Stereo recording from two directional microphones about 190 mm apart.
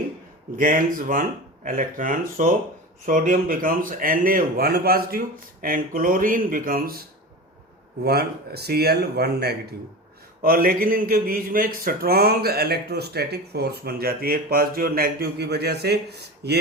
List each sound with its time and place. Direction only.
0.5 s a man's voice: 45° right (ahead or behind)
8.0 s speech: 55° right (ahead or behind)